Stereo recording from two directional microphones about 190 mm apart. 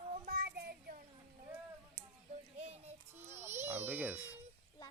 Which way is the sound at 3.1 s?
10° right (ahead or behind).